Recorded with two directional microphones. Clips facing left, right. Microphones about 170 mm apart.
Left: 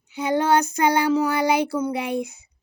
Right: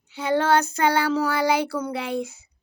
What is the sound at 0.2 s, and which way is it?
Child singing, 15° left (ahead or behind).